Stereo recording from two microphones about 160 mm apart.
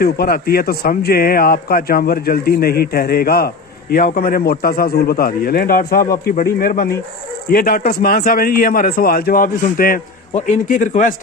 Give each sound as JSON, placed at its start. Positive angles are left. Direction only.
{"t": 0.0, "sound": "a man's voice", "side_deg": 70}